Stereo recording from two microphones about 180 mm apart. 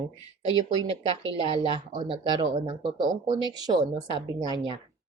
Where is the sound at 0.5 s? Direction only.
30° right (ahead or behind).